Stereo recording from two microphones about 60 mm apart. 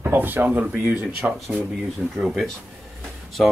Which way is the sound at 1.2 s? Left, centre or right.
Centre.